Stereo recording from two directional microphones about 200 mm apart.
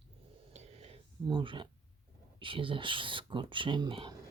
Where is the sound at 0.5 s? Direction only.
30° right (ahead or behind).